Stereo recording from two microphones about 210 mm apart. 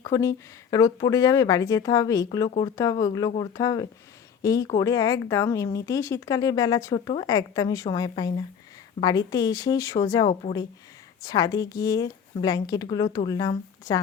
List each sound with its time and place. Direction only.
0.1 s a woman's voice: 15° left (ahead or behind)